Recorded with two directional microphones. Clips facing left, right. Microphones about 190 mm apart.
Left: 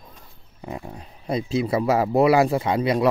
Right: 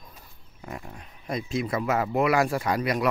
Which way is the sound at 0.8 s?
35° left (ahead or behind).